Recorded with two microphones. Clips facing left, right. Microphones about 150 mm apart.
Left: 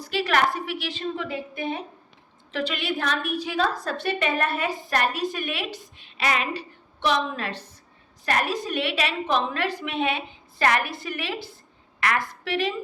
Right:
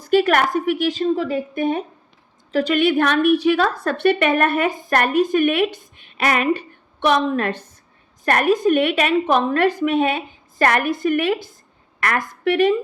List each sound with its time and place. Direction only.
0.0 s a woman's voice: 50° right (ahead or behind)